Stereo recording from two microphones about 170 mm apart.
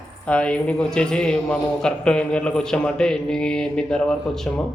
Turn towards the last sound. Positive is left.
turn(degrees=5)  # may be behind; listen again after turning